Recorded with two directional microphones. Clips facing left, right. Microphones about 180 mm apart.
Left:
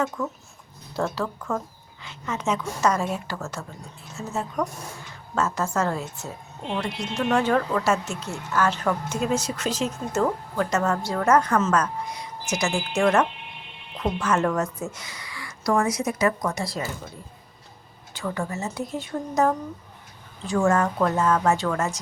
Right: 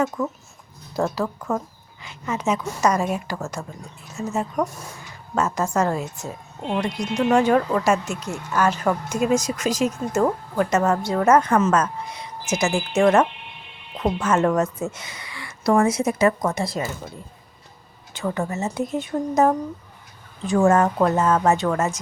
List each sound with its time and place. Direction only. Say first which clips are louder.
0.2 s speech: right 3 dB; 5° right (ahead or behind)
1.2 s a woman's voice: right 3 dB; 25° right (ahead or behind)
2.0 s a woman's voice: right 3 dB; 10° right (ahead or behind)
18.1 s a woman's voice: right 4 dB; 20° right (ahead or behind)
20.7 s a woman's voice: right 4 dB; 25° right (ahead or behind)